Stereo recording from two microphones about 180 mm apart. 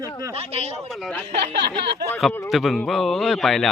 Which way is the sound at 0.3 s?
35° right (ahead or behind).